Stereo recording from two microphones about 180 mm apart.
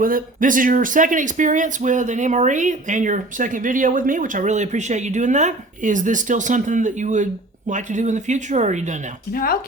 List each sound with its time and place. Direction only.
0.0 s speech: 50° right (ahead or behind)
9.3 s speech: 55° left (ahead or behind)